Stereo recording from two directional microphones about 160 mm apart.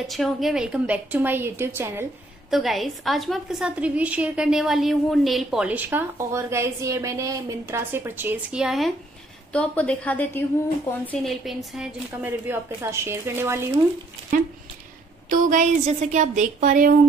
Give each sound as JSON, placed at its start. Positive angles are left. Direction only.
{"t": 0.0, "sound": "a woman's voice", "side_deg": 0}
{"t": 2.5, "sound": "a woman's voice", "side_deg": 0}
{"t": 11.2, "sound": "a woman's voice", "side_deg": 0}
{"t": 15.2, "sound": "a woman's voice", "side_deg": -55}